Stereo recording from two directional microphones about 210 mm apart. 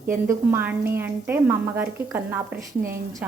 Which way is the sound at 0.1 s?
10° right (ahead or behind).